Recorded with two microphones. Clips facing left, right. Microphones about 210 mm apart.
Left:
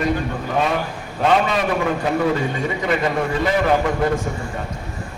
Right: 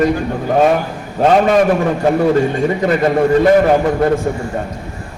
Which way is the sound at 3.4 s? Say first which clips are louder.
Right 4 dB; 45° right (ahead or behind).